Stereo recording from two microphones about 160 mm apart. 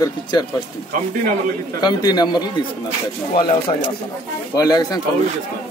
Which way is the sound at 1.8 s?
25° left (ahead or behind).